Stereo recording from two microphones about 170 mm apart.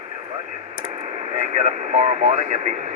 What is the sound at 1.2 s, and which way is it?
Speech, 40° right (ahead or behind).